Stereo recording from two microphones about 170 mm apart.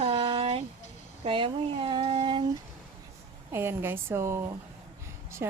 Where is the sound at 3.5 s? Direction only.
15° right (ahead or behind).